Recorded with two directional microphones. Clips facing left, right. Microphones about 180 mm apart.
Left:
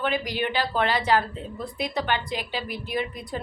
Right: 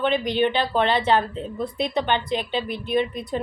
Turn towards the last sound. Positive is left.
turn(degrees=-20)  # may be behind; listen again after turning